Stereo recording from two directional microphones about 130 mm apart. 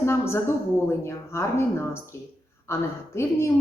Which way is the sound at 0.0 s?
20° left (ahead or behind).